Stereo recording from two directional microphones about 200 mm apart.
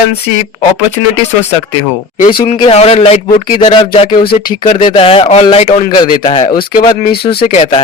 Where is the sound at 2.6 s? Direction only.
30° left (ahead or behind).